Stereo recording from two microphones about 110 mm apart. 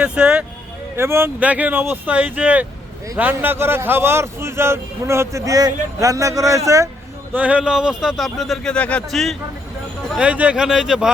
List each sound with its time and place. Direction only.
0.0 s speech: 10° right (ahead or behind)
0.9 s a man's voice: 25° right (ahead or behind)
7.3 s speech: 10° right (ahead or behind)
10.2 s speech: 10° right (ahead or behind)